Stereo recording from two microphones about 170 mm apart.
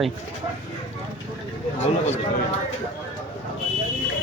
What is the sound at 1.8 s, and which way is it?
Speech, 40° left (ahead or behind).